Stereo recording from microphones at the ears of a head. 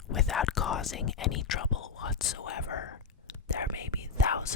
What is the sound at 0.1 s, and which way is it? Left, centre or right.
Whispering, left.